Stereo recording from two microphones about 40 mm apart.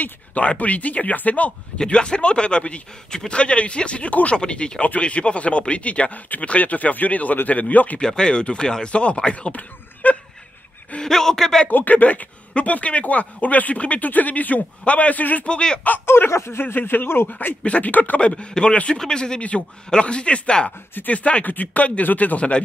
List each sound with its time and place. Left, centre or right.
0.0 s speech: left
1.8 s speech: left
4.8 s speech: left
8.0 s speech: left
9.5 s a sound: left
11.0 s a man's voice: centre
11.7 s speech: left
15.4 s speech: left
16.1 s speech: left
17.3 s speech: left
17.6 s speech: left
18.2 s speech: left